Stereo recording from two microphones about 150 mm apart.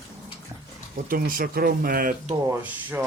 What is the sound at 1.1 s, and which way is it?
Speech, 70° right (ahead or behind).